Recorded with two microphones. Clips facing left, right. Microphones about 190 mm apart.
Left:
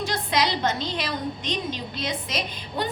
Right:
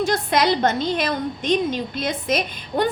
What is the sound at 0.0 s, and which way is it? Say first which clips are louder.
A woman's voice: right 5 dB; 50° right (ahead or behind).